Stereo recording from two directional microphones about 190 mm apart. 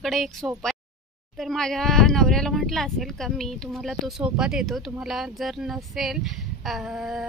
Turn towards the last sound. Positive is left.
turn(degrees=0)  # may be behind; listen again after turning